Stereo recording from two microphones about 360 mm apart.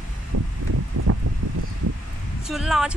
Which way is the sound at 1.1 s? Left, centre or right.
Right.